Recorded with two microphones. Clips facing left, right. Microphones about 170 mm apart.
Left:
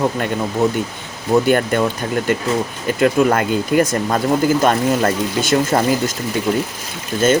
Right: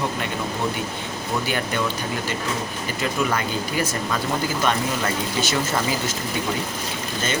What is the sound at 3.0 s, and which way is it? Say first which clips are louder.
Speech: left 10 dB; 50° left (ahead or behind).